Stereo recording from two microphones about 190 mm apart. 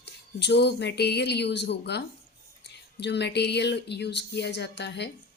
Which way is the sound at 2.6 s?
65° left (ahead or behind).